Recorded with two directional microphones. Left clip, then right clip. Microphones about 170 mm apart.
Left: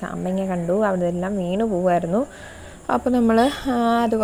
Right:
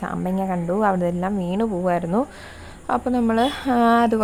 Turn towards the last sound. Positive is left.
turn(degrees=0)  # may be behind; listen again after turning